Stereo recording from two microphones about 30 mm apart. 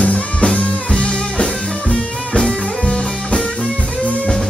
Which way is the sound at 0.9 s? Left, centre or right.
Left.